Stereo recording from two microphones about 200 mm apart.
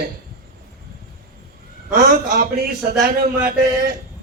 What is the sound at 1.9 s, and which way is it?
A man's voice, 45° right (ahead or behind).